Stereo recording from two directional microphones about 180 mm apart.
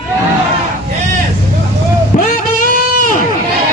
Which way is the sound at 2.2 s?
45° left (ahead or behind).